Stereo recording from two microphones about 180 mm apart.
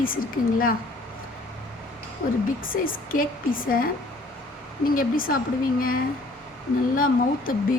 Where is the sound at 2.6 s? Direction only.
50° left (ahead or behind).